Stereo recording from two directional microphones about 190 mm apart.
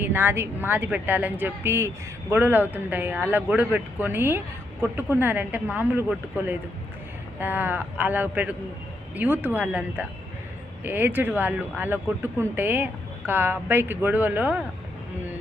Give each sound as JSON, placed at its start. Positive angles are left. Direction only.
{"t": 0.0, "sound": "speech", "side_deg": -10}